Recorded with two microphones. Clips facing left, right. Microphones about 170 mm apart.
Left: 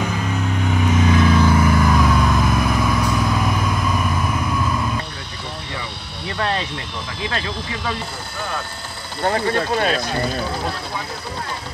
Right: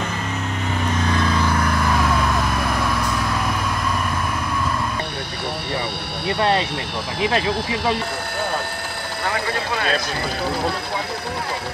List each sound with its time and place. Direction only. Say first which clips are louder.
0.0 s vehicle: left 3 dB; centre (ahead or behind)
7.2 s speech: right 6 dB; 25° right (ahead or behind)